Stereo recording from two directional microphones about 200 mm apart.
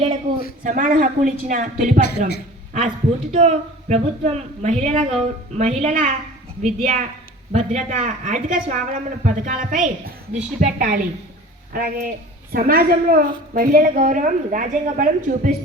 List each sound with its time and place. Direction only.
0.6 s speech: 40° right (ahead or behind)
2.0 s a woman's voice: 55° left (ahead or behind)
3.3 s a woman's voice: 35° right (ahead or behind)